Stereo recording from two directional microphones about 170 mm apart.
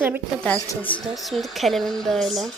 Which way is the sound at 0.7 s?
10° left (ahead or behind).